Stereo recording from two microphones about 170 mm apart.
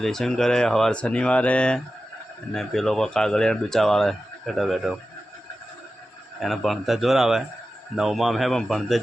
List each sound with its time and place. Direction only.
0.0 s speech: 5° left (ahead or behind)
6.4 s speech: centre (ahead or behind)